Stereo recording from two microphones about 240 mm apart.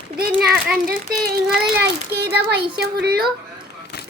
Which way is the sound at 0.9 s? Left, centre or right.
Right.